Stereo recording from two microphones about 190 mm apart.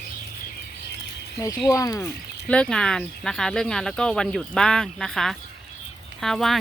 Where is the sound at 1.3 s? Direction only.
20° left (ahead or behind).